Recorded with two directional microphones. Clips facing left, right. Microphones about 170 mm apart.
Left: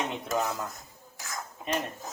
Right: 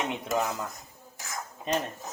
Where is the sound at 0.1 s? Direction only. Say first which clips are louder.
Right 1 dB; 15° right (ahead or behind).